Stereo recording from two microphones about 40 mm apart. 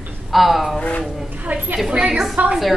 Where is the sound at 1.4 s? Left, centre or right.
Right.